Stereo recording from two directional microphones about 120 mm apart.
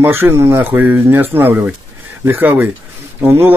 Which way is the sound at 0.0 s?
20° right (ahead or behind).